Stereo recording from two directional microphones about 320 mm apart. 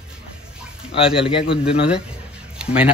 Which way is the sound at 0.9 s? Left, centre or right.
Centre.